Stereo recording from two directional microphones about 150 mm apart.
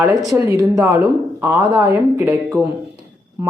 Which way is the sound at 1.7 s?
15° right (ahead or behind).